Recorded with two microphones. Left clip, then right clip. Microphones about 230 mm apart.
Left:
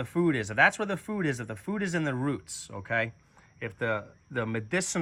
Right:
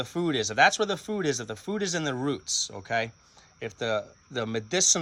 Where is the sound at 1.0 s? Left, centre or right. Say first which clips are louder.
Right 3 dB; centre.